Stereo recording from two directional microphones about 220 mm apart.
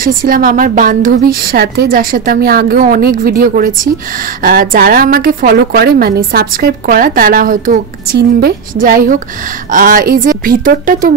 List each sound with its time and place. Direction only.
0.0 s a woman's voice: 40° right (ahead or behind)